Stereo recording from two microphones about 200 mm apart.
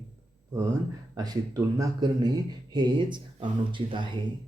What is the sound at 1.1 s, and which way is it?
Speech, 20° right (ahead or behind).